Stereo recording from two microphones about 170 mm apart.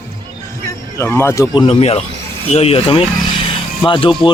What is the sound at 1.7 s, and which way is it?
A man's voice, 35° left (ahead or behind).